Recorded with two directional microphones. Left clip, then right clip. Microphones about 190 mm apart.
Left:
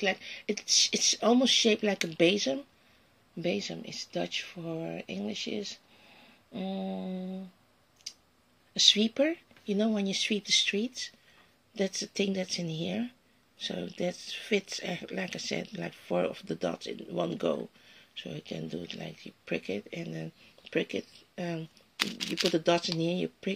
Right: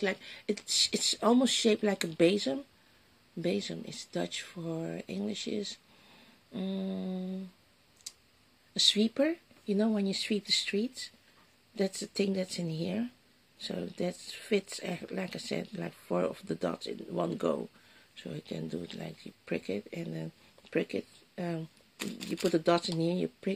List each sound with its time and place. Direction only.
0.0 s speech: 15° right (ahead or behind)
3.3 s speech: 20° right (ahead or behind)
8.7 s speech: 10° right (ahead or behind)
12.1 s speech: 5° right (ahead or behind)